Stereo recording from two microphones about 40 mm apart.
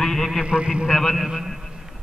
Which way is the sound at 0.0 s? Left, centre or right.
Centre.